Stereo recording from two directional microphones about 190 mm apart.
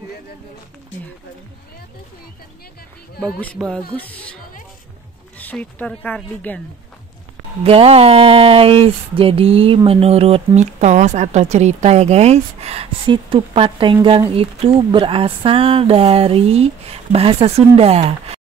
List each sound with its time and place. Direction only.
3.2 s speech: 5° left (ahead or behind)
5.4 s speech: 10° left (ahead or behind)
7.6 s speech: 30° right (ahead or behind)